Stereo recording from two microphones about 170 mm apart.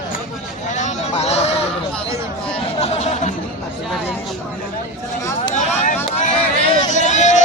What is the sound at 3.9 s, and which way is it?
Speech, centre (ahead or behind).